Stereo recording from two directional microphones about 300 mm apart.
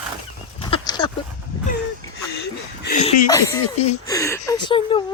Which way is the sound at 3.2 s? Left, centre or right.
Centre.